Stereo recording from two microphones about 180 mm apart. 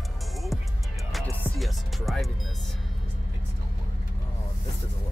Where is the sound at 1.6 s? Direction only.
Centre (ahead or behind).